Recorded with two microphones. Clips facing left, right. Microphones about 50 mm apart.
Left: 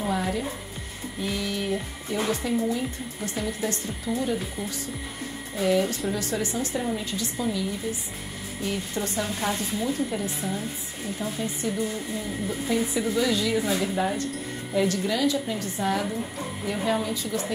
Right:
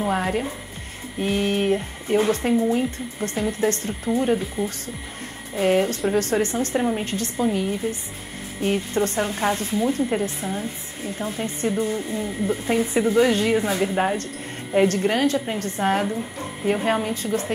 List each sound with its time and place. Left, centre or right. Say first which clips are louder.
0.1 s speech: right 4 dB; right
4.6 s speech: right 5 dB; right